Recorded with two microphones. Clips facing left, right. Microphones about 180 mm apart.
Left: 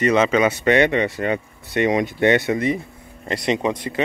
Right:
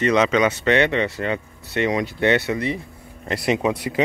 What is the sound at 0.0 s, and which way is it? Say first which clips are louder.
Speech: left 1 dB; 5° left (ahead or behind).